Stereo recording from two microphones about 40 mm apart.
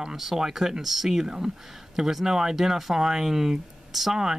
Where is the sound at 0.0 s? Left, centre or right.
Centre.